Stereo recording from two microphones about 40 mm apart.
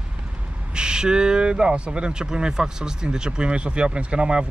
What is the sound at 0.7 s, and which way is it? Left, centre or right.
Speech, centre.